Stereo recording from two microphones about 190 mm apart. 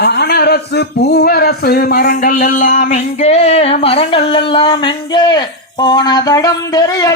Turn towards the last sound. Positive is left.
turn(degrees=20)  # may be behind; listen again after turning